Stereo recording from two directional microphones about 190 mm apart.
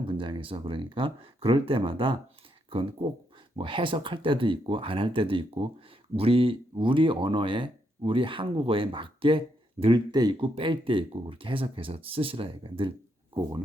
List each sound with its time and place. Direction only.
0.0 s speech: 25° right (ahead or behind)